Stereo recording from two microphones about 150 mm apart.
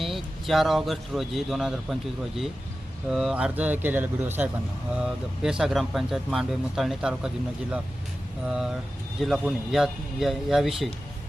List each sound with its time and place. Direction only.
0.0 s speech: centre (ahead or behind)
8.4 s speech: 5° right (ahead or behind)